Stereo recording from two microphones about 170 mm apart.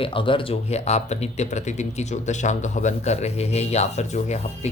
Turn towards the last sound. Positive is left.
turn(degrees=40)  # may be behind; listen again after turning